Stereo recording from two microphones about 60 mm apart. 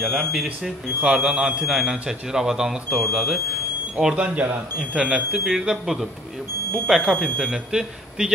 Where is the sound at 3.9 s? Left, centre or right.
Centre.